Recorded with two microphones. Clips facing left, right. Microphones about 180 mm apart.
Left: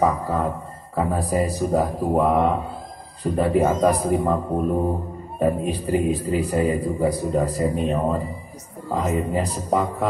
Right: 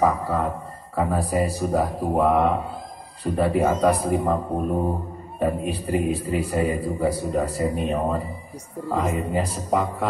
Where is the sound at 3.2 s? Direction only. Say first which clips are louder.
Left 2 dB; 30° left (ahead or behind).